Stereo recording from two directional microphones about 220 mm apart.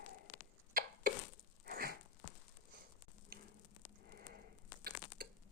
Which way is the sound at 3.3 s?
40° right (ahead or behind).